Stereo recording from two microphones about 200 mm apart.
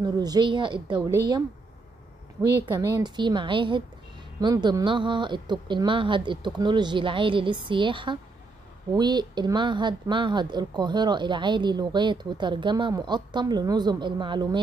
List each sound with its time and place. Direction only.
0.0 s speech: 20° right (ahead or behind)
2.6 s speech: 20° right (ahead or behind)